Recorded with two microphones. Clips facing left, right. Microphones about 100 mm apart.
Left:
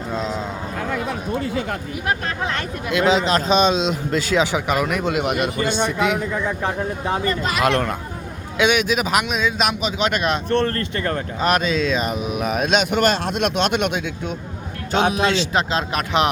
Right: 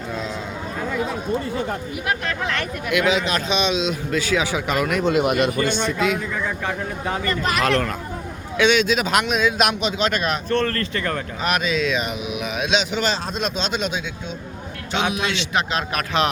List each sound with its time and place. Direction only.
0.1 s speech: 25° left (ahead or behind)
1.4 s speech: 90° left
2.0 s speech: 30° left (ahead or behind)
4.5 s speech: 15° left (ahead or behind)
5.8 s speech: 20° left (ahead or behind)
6.6 s a man's voice: 30° left (ahead or behind); by 9.9 s centre (ahead or behind)
10.0 s speech: 20° left (ahead or behind); by 14.3 s 60° left (ahead or behind)
14.9 s speech: 35° left (ahead or behind)